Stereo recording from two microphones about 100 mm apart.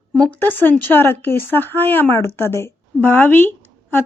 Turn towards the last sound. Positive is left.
turn(degrees=20)  # may be behind; listen again after turning